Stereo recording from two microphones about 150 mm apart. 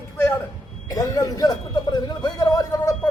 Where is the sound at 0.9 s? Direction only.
25° left (ahead or behind).